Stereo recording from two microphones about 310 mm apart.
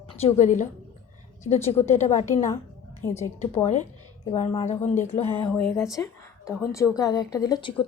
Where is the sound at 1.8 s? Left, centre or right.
Left.